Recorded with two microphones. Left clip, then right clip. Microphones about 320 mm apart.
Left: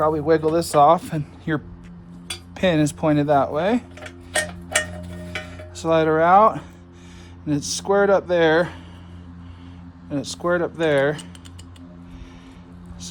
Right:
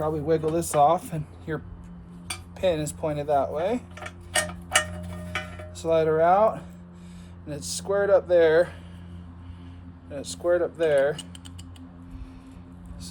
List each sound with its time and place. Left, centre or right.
0.0 s speech: left
2.6 s speech: left
4.0 s tick-tock: centre
5.7 s speech: left
10.2 s speech: left